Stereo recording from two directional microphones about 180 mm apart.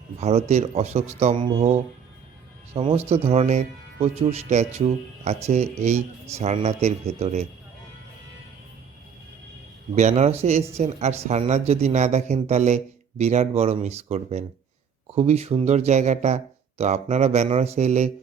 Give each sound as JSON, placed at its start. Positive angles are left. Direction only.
{"t": 0.2, "sound": "speech", "side_deg": -35}
{"t": 9.9, "sound": "speech", "side_deg": -40}